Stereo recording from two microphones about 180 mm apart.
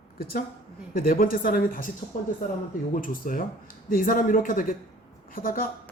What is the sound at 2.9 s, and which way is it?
A woman's voice, 50° left (ahead or behind).